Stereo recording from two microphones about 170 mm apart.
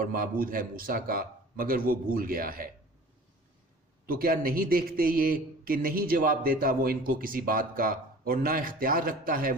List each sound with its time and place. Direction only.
0.0 s a man's voice: 55° right (ahead or behind)
4.0 s a man's voice: 60° right (ahead or behind)